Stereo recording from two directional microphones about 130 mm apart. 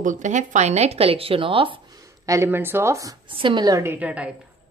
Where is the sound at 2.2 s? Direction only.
20° right (ahead or behind).